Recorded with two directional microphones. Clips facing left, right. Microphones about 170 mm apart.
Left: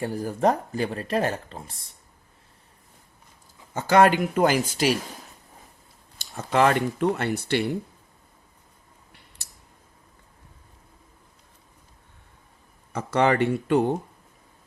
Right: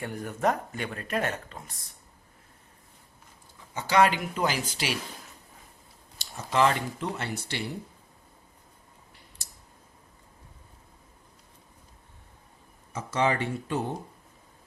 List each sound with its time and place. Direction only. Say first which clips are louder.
0.0 s speech: left 5 dB; 35° left (ahead or behind)
3.8 s speech: left 5 dB; 50° left (ahead or behind)
6.1 s speech: left 3 dB; 55° left (ahead or behind)
12.9 s speech: left 5 dB; 60° left (ahead or behind)